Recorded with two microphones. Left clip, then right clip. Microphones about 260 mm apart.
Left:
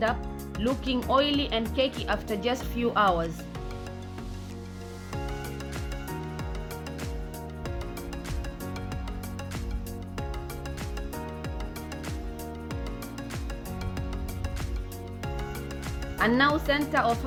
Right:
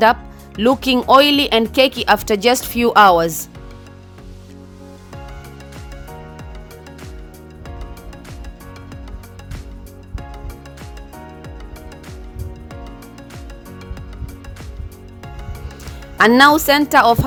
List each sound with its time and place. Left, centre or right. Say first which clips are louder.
0.6 s speech: right 14 dB; right
16.1 s speech: right 14 dB; right